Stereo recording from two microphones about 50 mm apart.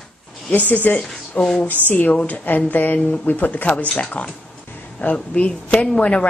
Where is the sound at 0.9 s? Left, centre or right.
Centre.